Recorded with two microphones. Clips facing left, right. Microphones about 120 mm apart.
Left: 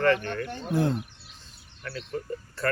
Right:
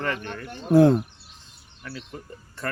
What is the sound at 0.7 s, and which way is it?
Speech, 90° right.